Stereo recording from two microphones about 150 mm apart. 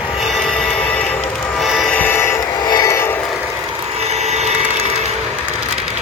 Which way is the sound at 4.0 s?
45° right (ahead or behind).